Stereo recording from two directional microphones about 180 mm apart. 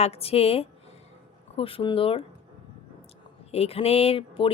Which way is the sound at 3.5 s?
35° left (ahead or behind).